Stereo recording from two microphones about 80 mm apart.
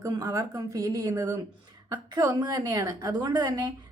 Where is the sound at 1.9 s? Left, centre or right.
Right.